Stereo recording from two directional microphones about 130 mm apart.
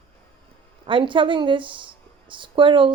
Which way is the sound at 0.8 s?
40° right (ahead or behind).